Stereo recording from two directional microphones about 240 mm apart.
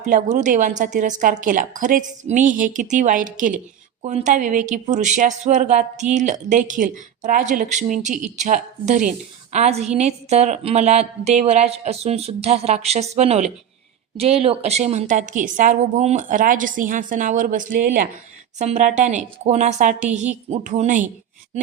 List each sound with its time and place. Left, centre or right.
0.0 s a woman's voice: right